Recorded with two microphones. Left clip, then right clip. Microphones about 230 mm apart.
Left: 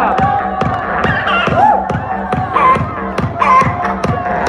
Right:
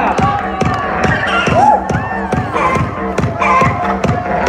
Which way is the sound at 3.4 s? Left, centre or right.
Right.